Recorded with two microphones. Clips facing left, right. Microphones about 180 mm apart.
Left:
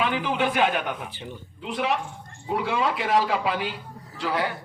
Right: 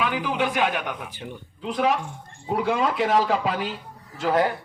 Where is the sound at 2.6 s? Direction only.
45° right (ahead or behind).